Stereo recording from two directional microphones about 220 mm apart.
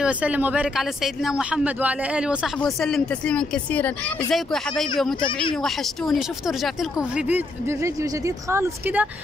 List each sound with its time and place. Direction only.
0.0 s speech: 5° right (ahead or behind)
5.2 s speech: 20° left (ahead or behind)
5.6 s speech: centre (ahead or behind)